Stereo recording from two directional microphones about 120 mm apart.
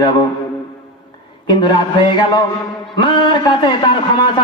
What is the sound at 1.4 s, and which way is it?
A man's voice, 40° left (ahead or behind).